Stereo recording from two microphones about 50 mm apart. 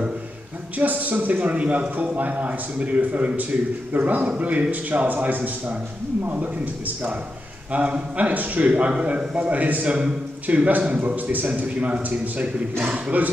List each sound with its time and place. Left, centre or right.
0.7 s a man's voice: right
7.7 s a man's voice: right